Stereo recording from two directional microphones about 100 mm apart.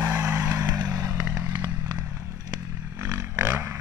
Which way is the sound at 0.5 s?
30° right (ahead or behind).